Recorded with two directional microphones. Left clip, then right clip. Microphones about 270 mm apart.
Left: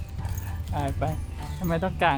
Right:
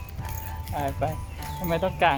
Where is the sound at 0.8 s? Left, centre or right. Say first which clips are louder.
Right 2 dB; centre.